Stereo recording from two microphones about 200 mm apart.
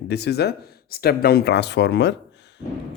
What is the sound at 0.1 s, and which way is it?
Speech, 55° left (ahead or behind).